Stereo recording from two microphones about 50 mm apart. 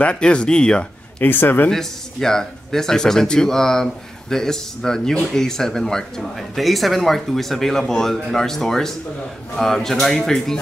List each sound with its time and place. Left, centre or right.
0.0 s speech: left
1.2 s speech: left
1.7 s speech: centre